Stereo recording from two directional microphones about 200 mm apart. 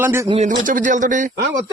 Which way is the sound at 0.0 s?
10° right (ahead or behind).